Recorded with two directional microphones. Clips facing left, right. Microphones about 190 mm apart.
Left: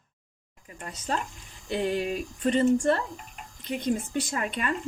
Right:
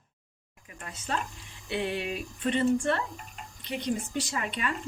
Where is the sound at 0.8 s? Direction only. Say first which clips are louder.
Left 2 dB; 35° left (ahead or behind).